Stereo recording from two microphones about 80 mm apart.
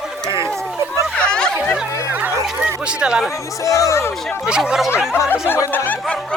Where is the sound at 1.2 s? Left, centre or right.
Centre.